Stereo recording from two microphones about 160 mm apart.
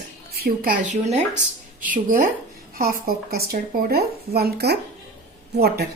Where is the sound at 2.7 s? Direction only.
70° right (ahead or behind).